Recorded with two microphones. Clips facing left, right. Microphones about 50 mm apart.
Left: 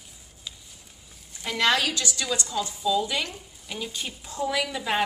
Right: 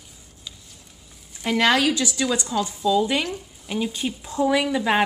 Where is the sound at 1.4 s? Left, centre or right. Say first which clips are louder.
Right 4 dB; centre.